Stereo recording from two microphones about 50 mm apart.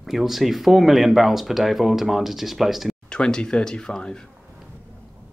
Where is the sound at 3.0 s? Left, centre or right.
Centre.